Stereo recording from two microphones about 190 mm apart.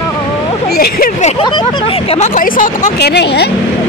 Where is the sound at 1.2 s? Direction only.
25° left (ahead or behind); by 3.5 s 60° left (ahead or behind).